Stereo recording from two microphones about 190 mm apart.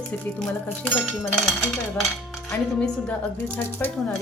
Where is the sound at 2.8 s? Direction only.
5° left (ahead or behind).